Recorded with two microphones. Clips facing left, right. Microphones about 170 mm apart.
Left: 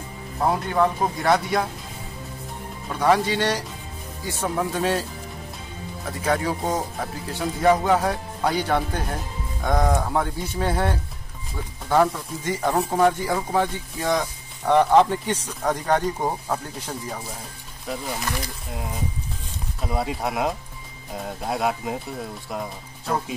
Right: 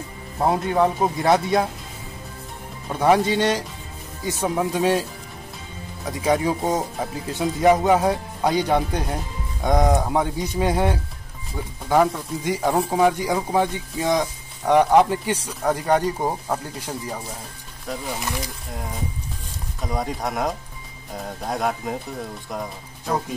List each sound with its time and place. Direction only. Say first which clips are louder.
0.4 s speech: right 2 dB; 20° right (ahead or behind)
2.9 s speech: right 2 dB; 20° right (ahead or behind)
6.0 s speech: right 3 dB; 15° right (ahead or behind)
19.8 s speech: even; 5° left (ahead or behind)